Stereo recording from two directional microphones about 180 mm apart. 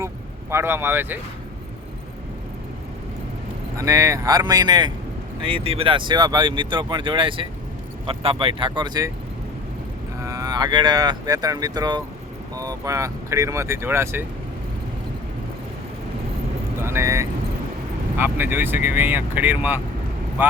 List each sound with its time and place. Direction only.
0.5 s speech: 15° right (ahead or behind)
3.8 s speech: 20° right (ahead or behind)
10.2 s speech: 20° right (ahead or behind)
16.8 s speech: 15° right (ahead or behind)